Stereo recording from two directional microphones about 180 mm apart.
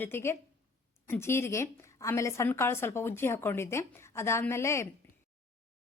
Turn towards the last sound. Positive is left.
turn(degrees=15)  # may be behind; listen again after turning